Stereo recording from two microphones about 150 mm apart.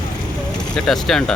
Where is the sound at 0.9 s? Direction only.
5° left (ahead or behind).